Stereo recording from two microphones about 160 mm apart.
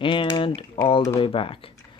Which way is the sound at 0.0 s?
30° left (ahead or behind).